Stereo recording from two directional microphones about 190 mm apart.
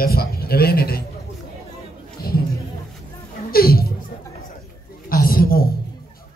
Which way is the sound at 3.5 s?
55° left (ahead or behind).